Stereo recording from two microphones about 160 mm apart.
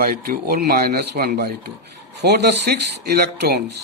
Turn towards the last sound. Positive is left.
turn(degrees=-80)